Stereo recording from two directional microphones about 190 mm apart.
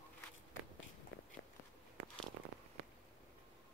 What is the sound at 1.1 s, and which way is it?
Biting, 90° left.